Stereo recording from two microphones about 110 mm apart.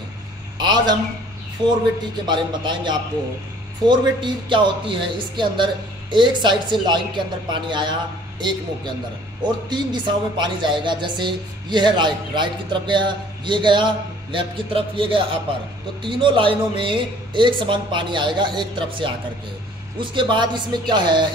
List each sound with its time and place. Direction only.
0.6 s a man's voice: 40° right (ahead or behind)
2.2 s speech: 45° right (ahead or behind)